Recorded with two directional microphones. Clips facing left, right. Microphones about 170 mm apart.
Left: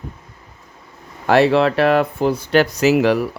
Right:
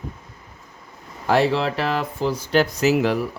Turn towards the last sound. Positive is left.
turn(degrees=75)  # may be behind; listen again after turning